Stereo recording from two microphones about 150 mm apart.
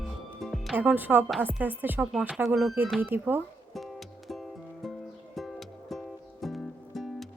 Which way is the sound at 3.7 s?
Centre (ahead or behind).